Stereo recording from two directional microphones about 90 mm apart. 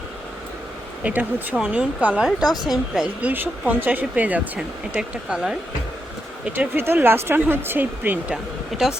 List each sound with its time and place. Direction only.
1.0 s speech: 20° right (ahead or behind)
1.5 s speech: 10° right (ahead or behind)
3.2 s speech: 20° right (ahead or behind)
6.7 s speech: 25° right (ahead or behind)